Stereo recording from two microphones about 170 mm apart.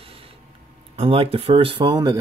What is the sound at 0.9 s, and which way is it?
Speech, 35° right (ahead or behind).